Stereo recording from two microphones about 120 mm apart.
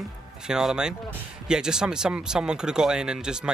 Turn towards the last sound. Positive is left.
turn(degrees=-5)  # may be behind; listen again after turning